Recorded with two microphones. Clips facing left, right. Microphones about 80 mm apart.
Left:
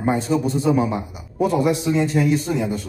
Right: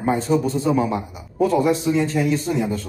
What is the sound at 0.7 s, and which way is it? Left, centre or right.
Speech, centre.